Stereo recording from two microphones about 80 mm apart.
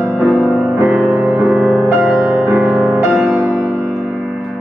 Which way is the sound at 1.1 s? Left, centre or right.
Right.